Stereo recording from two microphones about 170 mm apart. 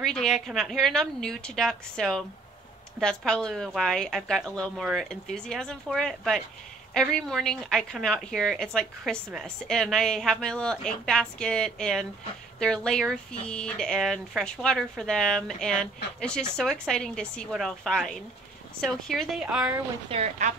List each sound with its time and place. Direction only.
0.0 s a woman's voice: 5° left (ahead or behind)
20.1 s speech: 40° right (ahead or behind)